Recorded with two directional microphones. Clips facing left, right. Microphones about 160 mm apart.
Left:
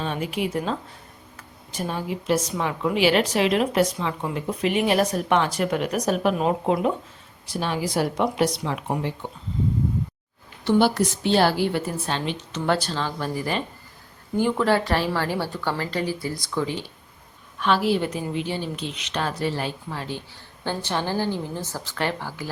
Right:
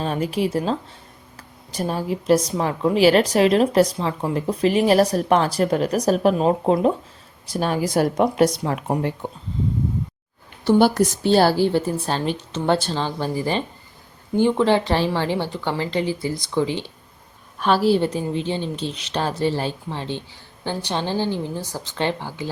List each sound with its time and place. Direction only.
0.0 s a woman's voice: 40° right (ahead or behind)
7.4 s a woman's voice: 45° right (ahead or behind)
10.6 s a woman's voice: 40° right (ahead or behind)
12.5 s a woman's voice: 25° right (ahead or behind)